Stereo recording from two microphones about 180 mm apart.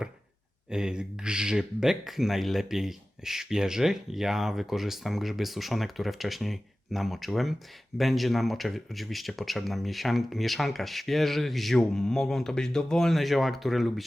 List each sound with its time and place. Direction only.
0.7 s speech: 5° right (ahead or behind)